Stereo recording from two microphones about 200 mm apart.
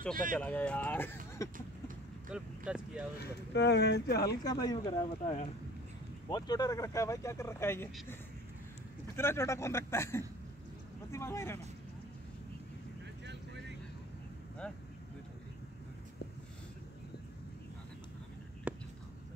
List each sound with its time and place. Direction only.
0.1 s speech: 40° right (ahead or behind)
0.4 s speech: 5° left (ahead or behind)
2.3 s speech: 5° right (ahead or behind)
3.2 s speech: 55° left (ahead or behind)
4.5 s speech: 20° left (ahead or behind)
9.1 s speech: 15° left (ahead or behind)
18.7 s a sound: 5° right (ahead or behind)